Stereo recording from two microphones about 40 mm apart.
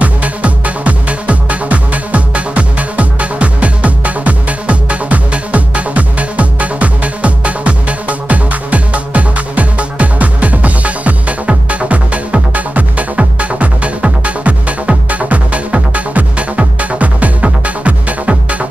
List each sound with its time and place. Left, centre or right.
0.0 s music: right